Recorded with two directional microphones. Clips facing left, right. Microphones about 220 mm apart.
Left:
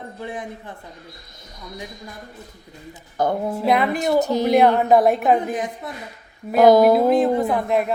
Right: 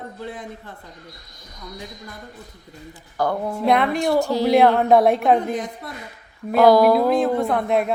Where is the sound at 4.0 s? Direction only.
20° left (ahead or behind).